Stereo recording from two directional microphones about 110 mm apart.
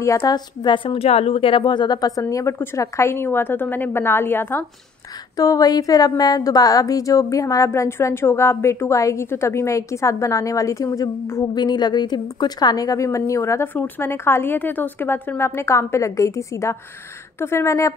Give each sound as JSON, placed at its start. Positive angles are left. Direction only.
{"t": 0.2, "sound": "a woman's voice", "side_deg": 40}
{"t": 5.3, "sound": "a woman's voice", "side_deg": 35}
{"t": 11.5, "sound": "a woman's voice", "side_deg": 40}